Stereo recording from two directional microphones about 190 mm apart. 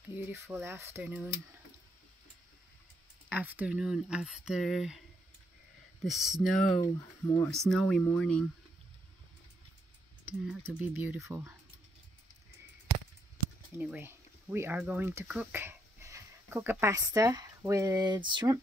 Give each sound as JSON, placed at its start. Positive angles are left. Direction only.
{"t": 0.1, "sound": "speech", "side_deg": -10}
{"t": 3.3, "sound": "speech", "side_deg": -10}
{"t": 6.0, "sound": "speech", "side_deg": 0}
{"t": 6.8, "sound": "speech", "side_deg": 15}
{"t": 7.5, "sound": "speech", "side_deg": 0}
{"t": 10.7, "sound": "speech", "side_deg": -10}
{"t": 13.7, "sound": "speech", "side_deg": -10}